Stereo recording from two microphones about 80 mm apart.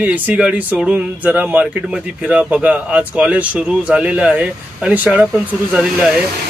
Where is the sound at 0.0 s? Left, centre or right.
Centre.